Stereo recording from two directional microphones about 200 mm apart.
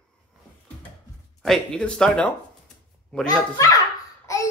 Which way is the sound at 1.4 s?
Centre (ahead or behind).